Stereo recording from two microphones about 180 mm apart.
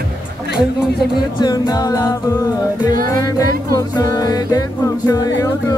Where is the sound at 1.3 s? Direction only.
20° left (ahead or behind).